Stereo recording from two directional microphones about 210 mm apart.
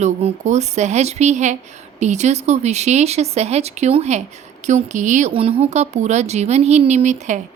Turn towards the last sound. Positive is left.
turn(degrees=-35)  # may be behind; listen again after turning